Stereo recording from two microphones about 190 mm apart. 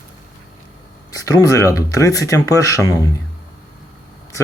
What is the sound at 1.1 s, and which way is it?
Speech, 15° left (ahead or behind).